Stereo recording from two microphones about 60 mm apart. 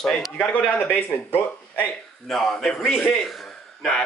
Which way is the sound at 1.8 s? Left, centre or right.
Centre.